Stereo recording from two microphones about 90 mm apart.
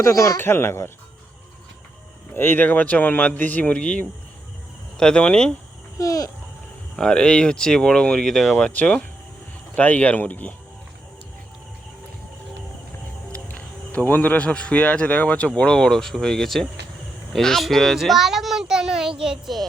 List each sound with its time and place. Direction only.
0.0 s speech: 40° left (ahead or behind)
0.3 s speech: 25° left (ahead or behind)
2.3 s speech: 25° left (ahead or behind)
6.0 s speech: 40° left (ahead or behind)
6.9 s speech: 10° left (ahead or behind)
8.5 s speech: 15° left (ahead or behind)
13.3 s speech: 15° left (ahead or behind); by 19.6 s 5° right (ahead or behind)